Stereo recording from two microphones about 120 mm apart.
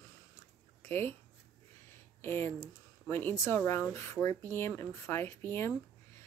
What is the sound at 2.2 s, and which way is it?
Speech, 20° left (ahead or behind).